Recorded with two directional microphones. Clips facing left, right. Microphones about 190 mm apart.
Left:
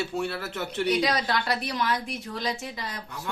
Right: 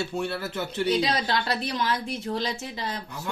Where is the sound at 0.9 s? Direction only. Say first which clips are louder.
Even; 25° right (ahead or behind).